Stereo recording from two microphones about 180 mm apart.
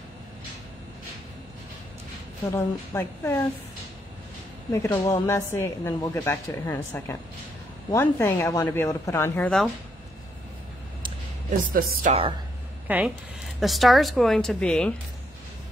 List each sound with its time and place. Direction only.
2.5 s a woman's voice: 15° left (ahead or behind)
4.7 s a woman's voice: 20° left (ahead or behind)
11.7 s speech: 50° right (ahead or behind)
12.1 s speech: 30° right (ahead or behind)
12.8 s a woman's voice: 10° right (ahead or behind)